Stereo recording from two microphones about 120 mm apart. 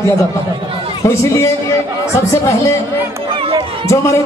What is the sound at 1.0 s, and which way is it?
Speech, 25° left (ahead or behind).